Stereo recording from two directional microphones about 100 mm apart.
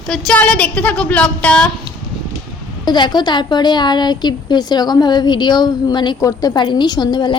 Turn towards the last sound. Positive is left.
turn(degrees=45)  # may be behind; listen again after turning